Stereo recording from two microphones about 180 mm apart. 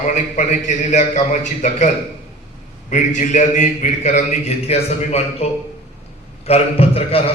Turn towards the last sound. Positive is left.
turn(degrees=35)  # may be behind; listen again after turning